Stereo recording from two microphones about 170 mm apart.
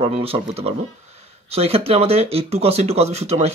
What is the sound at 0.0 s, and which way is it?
Speech, 35° right (ahead or behind).